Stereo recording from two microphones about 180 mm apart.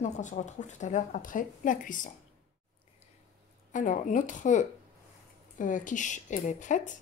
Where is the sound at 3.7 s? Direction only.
45° left (ahead or behind).